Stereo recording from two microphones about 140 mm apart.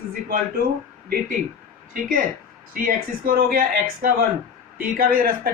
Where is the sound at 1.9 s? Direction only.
85° right.